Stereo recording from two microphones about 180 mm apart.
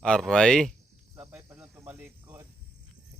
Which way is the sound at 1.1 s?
10° right (ahead or behind).